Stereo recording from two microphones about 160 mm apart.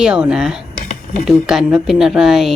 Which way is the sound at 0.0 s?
5° right (ahead or behind).